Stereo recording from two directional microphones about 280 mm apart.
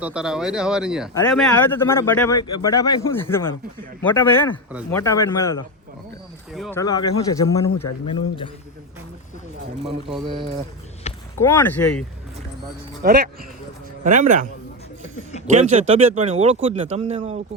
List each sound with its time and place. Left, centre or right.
0.0 s speech: centre
1.1 s speech: centre
6.5 s speech: centre
6.7 s speech: centre
11.3 s speech: centre
13.0 s speech: right
15.5 s speech: right